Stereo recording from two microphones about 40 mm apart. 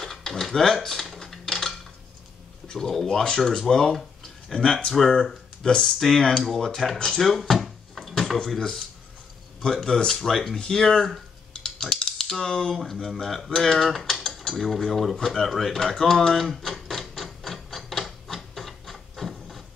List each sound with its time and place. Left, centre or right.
0.0 s dishes: centre
2.9 s speech: centre
7.2 s dishes: centre
7.6 s a sound: centre
8.5 s speech: centre
11.6 s clicking: centre
12.2 s speech: centre
13.0 s dishes: centre
15.1 s speech: centre
16.3 s a sound: centre
18.3 s printer: centre